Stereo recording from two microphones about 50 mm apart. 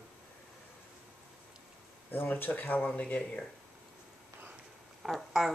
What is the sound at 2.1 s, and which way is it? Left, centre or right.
Speech, left.